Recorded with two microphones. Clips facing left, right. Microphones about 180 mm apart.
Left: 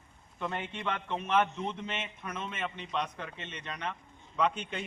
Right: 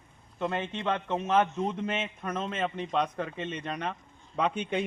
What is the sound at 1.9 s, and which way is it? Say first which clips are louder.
A man's voice: right 6 dB; 50° right (ahead or behind).